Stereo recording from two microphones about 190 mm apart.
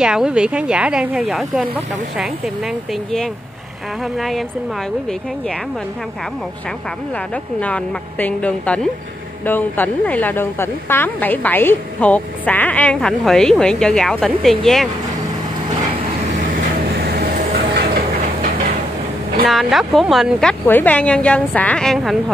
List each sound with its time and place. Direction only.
0.0 s speech: 5° right (ahead or behind)
7.6 s a woman's voice: 10° left (ahead or behind)
17.0 s train: 50° right (ahead or behind)
19.4 s speech: centre (ahead or behind)